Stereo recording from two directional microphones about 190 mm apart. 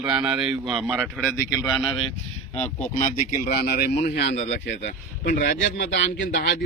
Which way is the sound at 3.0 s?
45° left (ahead or behind).